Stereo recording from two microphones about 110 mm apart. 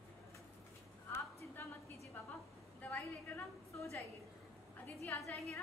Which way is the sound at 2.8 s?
20° left (ahead or behind).